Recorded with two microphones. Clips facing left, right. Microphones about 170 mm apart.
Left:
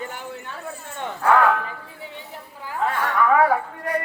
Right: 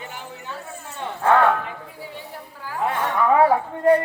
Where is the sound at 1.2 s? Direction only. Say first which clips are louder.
Right 1 dB; 25° right (ahead or behind).